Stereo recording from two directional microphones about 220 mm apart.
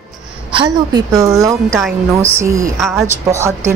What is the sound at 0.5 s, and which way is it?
A woman's voice, 20° right (ahead or behind).